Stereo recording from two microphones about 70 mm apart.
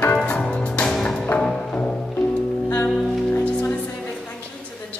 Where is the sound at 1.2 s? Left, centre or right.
Centre.